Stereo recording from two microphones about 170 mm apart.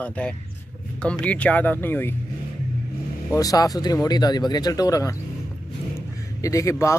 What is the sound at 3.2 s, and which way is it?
Speech, 20° left (ahead or behind).